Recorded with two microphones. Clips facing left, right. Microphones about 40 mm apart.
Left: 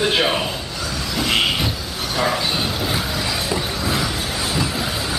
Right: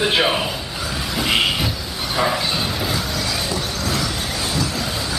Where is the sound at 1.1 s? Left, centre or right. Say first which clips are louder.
Even; centre.